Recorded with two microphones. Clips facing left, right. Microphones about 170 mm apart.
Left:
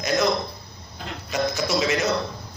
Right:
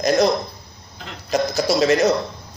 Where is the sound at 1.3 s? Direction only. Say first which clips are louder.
Right 5 dB; 40° right (ahead or behind).